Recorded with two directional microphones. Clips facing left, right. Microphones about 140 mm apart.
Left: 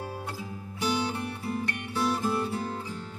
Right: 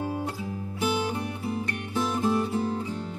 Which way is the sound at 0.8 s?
10° right (ahead or behind).